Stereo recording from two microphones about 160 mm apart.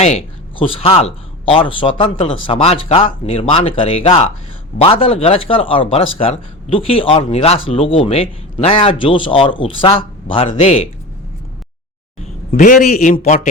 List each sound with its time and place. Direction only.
0.0 s speech: 40° left (ahead or behind)
12.2 s a man's voice: 50° left (ahead or behind)